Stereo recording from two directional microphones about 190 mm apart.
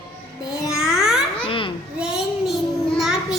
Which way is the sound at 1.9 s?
5° right (ahead or behind).